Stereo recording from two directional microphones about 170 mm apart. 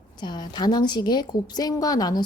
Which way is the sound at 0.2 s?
25° left (ahead or behind).